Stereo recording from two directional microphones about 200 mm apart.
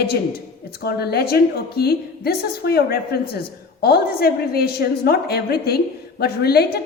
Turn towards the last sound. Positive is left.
turn(degrees=50)  # may be behind; listen again after turning